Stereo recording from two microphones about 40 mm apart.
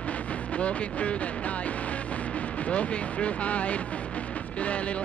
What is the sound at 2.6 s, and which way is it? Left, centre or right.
Speech, left.